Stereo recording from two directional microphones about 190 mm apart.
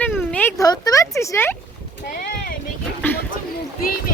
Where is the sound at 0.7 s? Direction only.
20° left (ahead or behind).